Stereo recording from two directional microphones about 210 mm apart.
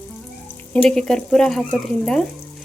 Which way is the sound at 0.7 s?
5° left (ahead or behind).